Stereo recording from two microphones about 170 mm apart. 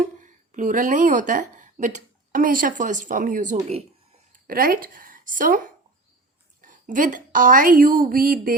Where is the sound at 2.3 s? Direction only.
55° right (ahead or behind).